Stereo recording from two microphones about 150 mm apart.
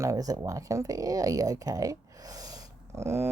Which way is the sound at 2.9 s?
20° right (ahead or behind).